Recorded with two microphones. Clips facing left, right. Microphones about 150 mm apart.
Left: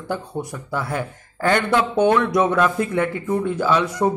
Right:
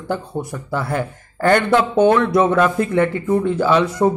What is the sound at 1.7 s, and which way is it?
Speech, 50° right (ahead or behind).